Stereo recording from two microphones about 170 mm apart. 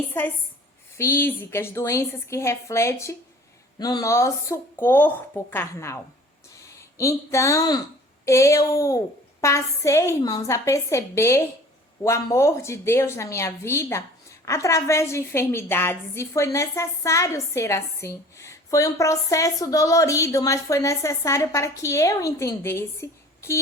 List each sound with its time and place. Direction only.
0.1 s a woman's voice: 10° left (ahead or behind)